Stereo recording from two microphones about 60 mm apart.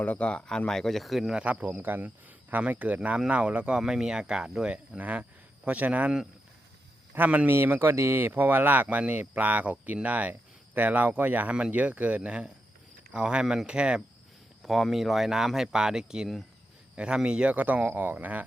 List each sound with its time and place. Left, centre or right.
0.0 s speech: left; by 1.3 s centre
1.3 s a man's voice: centre
7.5 s speech: right; by 14.0 s centre
14.6 s speech: centre; by 18.4 s right